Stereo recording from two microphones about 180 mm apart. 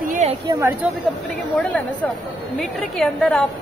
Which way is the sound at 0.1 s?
40° right (ahead or behind).